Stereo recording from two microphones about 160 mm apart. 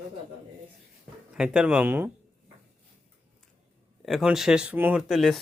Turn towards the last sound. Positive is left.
turn(degrees=0)  # may be behind; listen again after turning